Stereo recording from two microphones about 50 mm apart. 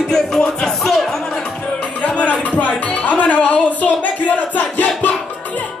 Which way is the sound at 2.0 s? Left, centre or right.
Left.